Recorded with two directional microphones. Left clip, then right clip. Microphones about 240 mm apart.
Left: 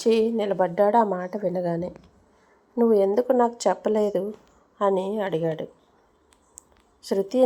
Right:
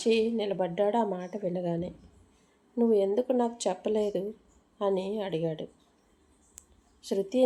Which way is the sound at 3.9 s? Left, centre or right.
Left.